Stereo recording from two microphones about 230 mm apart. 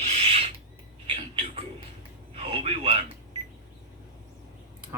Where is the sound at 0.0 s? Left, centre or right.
Right.